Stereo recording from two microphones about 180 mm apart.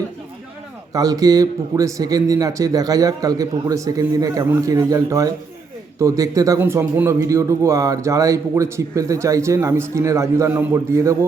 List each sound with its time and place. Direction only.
0.9 s a man's voice: 20° right (ahead or behind)